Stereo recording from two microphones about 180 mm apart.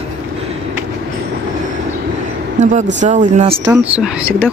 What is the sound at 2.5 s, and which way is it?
Speech, 40° right (ahead or behind).